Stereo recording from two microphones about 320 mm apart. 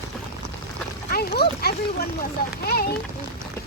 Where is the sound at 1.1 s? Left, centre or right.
Left.